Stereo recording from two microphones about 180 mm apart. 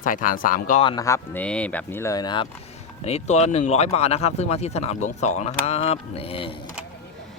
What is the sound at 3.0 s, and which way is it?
Speech, 35° left (ahead or behind).